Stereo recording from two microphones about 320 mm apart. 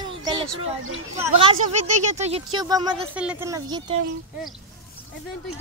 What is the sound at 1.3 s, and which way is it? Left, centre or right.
Speech, centre.